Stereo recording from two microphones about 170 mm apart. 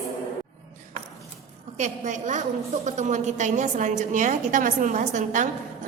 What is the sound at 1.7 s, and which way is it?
A woman's voice, 45° right (ahead or behind).